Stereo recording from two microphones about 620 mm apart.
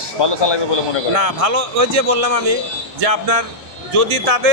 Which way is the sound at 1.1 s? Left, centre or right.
Right.